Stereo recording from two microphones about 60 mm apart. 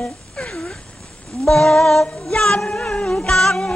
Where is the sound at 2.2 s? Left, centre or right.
Centre.